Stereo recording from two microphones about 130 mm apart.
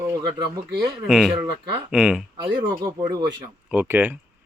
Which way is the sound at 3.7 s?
15° right (ahead or behind).